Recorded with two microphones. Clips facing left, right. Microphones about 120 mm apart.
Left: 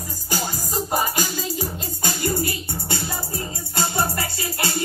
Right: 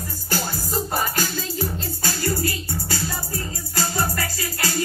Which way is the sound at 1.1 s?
15° left (ahead or behind).